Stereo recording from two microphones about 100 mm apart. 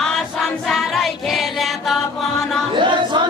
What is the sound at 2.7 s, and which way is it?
Choir, 50° right (ahead or behind).